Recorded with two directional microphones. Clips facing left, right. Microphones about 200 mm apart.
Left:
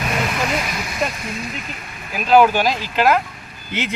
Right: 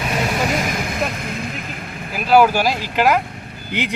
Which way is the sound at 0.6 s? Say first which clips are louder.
Right 2 dB; 50° right (ahead or behind).